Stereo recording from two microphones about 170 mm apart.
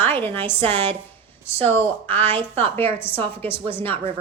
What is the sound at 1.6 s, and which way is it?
Speech, 10° left (ahead or behind).